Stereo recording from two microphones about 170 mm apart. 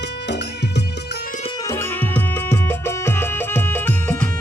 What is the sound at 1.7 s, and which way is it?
Music, 10° left (ahead or behind).